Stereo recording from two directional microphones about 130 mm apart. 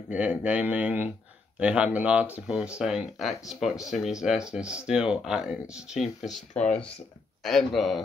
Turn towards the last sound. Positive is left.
turn(degrees=0)  # may be behind; listen again after turning